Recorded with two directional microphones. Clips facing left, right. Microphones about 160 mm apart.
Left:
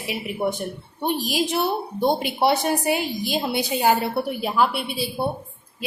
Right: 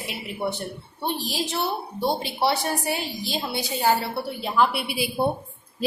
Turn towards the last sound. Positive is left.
turn(degrees=-10)  # may be behind; listen again after turning